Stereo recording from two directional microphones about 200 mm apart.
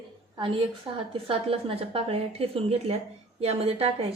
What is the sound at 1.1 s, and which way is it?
A woman's voice, 30° right (ahead or behind).